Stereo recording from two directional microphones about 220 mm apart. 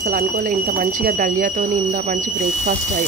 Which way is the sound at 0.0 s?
35° right (ahead or behind).